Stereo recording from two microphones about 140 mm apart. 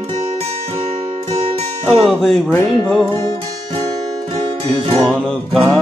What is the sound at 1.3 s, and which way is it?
Music, 45° right (ahead or behind).